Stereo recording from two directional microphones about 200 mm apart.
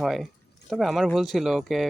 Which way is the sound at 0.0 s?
Centre (ahead or behind).